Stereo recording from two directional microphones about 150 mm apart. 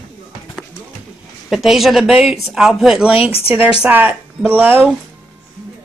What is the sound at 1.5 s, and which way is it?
Speech, centre (ahead or behind).